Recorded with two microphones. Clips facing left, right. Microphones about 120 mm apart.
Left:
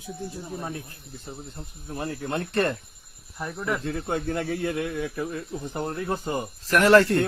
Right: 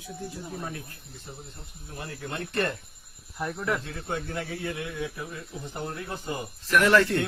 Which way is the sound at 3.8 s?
50° left (ahead or behind).